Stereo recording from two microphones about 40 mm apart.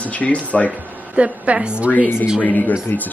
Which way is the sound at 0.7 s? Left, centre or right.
Right.